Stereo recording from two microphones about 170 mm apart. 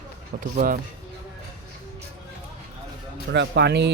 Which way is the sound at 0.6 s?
55° right (ahead or behind).